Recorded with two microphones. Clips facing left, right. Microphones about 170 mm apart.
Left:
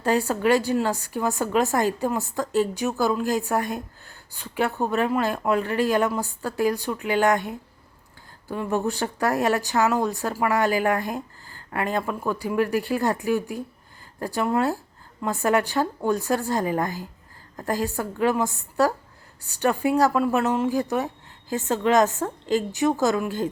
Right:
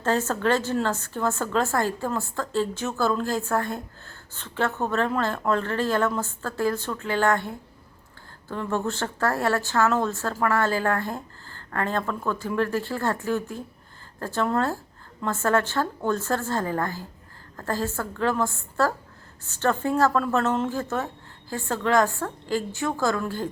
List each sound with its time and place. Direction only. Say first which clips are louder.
0.0 s a woman's voice: left 2 dB; 15° left (ahead or behind)